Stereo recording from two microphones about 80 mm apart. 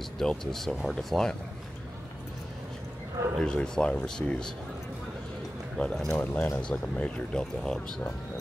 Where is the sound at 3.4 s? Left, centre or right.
Centre.